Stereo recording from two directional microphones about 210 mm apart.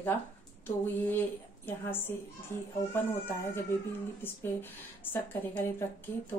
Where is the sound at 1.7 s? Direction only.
10° left (ahead or behind).